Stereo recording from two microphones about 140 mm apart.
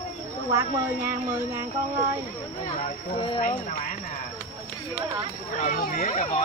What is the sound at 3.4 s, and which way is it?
Speech, 70° left (ahead or behind).